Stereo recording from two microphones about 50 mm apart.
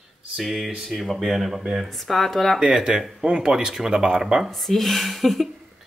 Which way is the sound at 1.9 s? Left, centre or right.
Centre.